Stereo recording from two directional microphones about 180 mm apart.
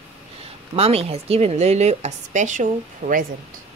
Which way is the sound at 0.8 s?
35° right (ahead or behind).